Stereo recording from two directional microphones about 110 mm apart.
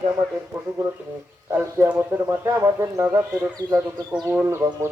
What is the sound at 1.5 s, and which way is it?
Speech, 25° right (ahead or behind).